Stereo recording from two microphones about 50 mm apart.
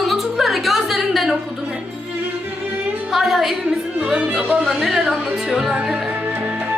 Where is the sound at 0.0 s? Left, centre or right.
Centre.